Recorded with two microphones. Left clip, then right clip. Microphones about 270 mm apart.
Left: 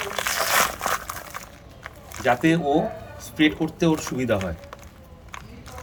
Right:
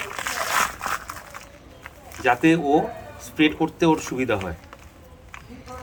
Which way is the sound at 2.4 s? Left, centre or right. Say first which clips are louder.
Right 2 dB; centre.